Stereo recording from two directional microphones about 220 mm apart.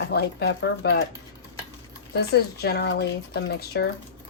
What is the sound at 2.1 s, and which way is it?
Speech, 45° left (ahead or behind).